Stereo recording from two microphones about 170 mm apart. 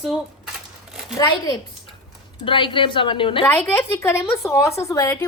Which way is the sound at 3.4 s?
10° left (ahead or behind).